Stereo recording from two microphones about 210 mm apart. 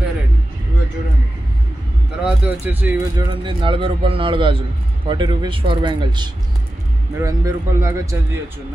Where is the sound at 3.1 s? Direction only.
25° right (ahead or behind).